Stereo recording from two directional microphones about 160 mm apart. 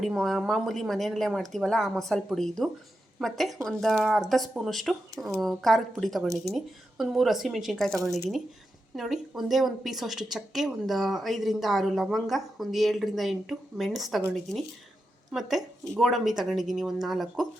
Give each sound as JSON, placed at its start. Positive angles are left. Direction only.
{"t": 0.0, "sound": "a woman's voice", "side_deg": 0}
{"t": 9.0, "sound": "a woman's voice", "side_deg": 0}
{"t": 15.3, "sound": "a woman's voice", "side_deg": 0}